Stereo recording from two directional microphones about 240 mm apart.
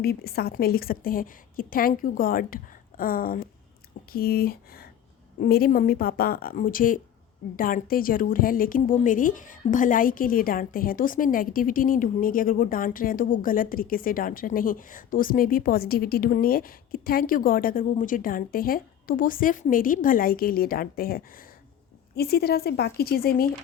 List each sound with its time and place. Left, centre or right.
0.0 s a woman's voice: left